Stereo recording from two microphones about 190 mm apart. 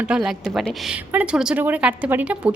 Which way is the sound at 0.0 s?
5° right (ahead or behind).